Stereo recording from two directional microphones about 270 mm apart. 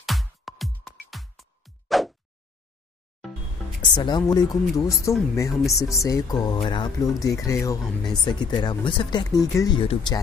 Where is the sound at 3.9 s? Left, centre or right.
Centre.